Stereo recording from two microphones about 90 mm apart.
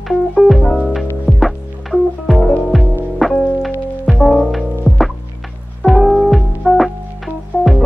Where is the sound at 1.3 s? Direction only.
Centre (ahead or behind).